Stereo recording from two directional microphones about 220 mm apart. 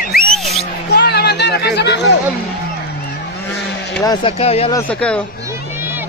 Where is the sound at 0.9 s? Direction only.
50° left (ahead or behind).